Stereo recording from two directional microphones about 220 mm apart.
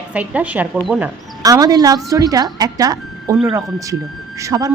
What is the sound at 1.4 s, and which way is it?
Speech, 15° right (ahead or behind).